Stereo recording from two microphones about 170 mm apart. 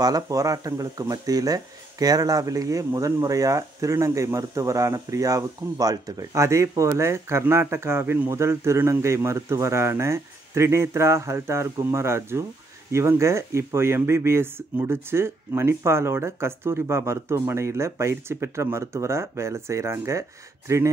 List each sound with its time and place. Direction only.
0.0 s speech: 20° right (ahead or behind)